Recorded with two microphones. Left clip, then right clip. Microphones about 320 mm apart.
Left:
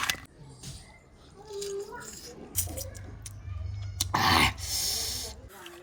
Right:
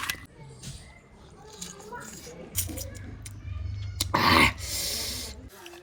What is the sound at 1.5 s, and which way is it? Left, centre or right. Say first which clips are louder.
Music: left 6 dB; centre.